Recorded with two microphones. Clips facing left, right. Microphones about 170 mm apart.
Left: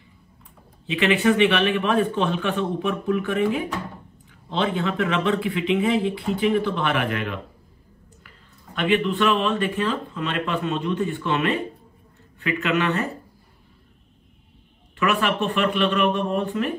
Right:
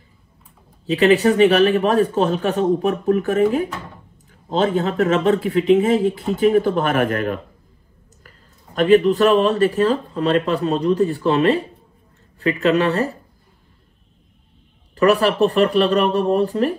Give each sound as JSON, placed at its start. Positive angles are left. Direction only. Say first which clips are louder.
{"t": 0.8, "sound": "a man's voice", "louder": "right 5 dB", "side_deg": -40}
{"t": 8.7, "sound": "speech", "louder": "right 8 dB", "side_deg": -40}
{"t": 15.0, "sound": "speech", "louder": "right 8 dB", "side_deg": -35}